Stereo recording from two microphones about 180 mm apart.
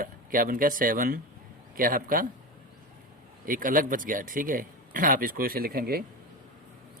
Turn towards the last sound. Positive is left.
turn(degrees=-55)  # may be behind; listen again after turning